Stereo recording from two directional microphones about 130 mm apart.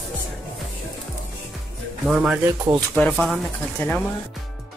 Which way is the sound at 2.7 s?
10° left (ahead or behind).